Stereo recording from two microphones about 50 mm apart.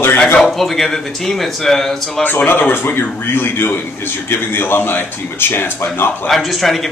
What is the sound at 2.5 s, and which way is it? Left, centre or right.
A man's voice, left.